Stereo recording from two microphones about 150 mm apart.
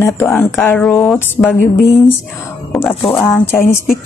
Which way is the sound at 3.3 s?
15° left (ahead or behind).